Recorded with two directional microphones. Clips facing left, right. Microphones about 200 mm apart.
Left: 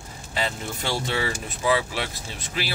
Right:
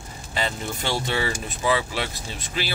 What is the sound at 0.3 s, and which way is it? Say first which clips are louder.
Speech: right 1 dB; centre (ahead or behind).